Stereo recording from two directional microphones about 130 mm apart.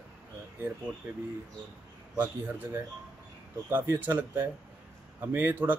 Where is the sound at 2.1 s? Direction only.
15° right (ahead or behind).